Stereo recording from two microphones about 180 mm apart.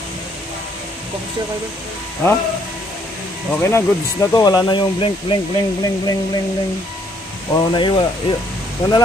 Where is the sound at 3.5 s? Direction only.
15° left (ahead or behind).